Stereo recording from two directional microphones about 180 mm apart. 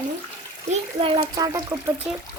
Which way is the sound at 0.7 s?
30° right (ahead or behind).